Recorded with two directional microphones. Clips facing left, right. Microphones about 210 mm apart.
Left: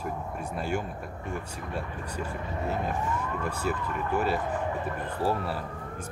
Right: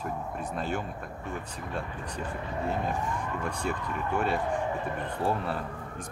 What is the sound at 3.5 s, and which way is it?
Speech, 5° left (ahead or behind).